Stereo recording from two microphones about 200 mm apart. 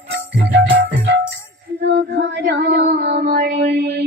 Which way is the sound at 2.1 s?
60° right (ahead or behind).